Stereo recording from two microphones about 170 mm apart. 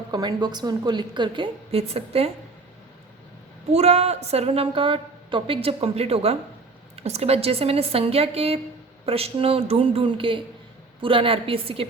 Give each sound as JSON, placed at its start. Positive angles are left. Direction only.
{"t": 0.1, "sound": "a woman's voice", "side_deg": -25}
{"t": 3.7, "sound": "a woman's voice", "side_deg": -40}